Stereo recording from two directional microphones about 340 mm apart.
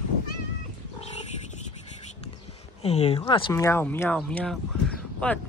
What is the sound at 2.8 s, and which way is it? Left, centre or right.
Speech, centre.